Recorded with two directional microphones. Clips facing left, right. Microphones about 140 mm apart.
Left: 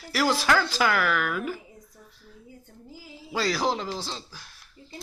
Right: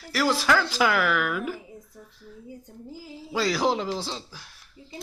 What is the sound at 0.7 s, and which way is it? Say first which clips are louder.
Speech: right 1 dB; 10° right (ahead or behind).